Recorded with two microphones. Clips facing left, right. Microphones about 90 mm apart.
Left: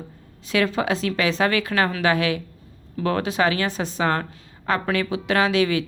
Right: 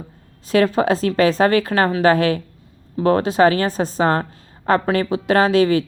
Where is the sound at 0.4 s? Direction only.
40° right (ahead or behind).